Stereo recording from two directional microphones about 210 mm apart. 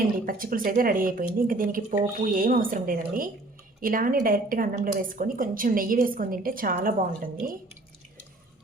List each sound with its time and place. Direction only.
0.3 s speech: 40° right (ahead or behind)